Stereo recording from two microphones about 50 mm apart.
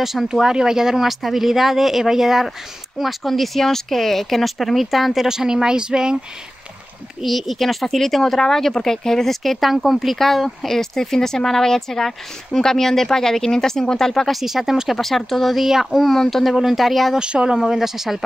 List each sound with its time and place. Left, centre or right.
0.0 s speech: centre
7.2 s speech: centre
14.4 s speech: centre
17.1 s speech: centre